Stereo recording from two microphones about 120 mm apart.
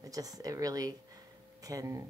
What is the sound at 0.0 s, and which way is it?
A woman's voice, 30° right (ahead or behind).